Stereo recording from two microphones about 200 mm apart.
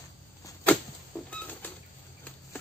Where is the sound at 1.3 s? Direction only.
5° left (ahead or behind).